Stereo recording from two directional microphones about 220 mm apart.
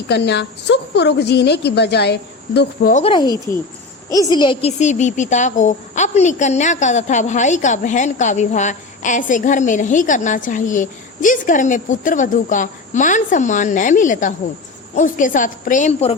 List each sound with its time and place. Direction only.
0.1 s a woman's voice: 50° left (ahead or behind)
2.9 s speech: 25° left (ahead or behind)
4.4 s speech: 25° left (ahead or behind)